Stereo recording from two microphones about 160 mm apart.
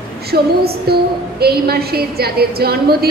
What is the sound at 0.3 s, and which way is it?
A woman's voice, 75° right (ahead or behind).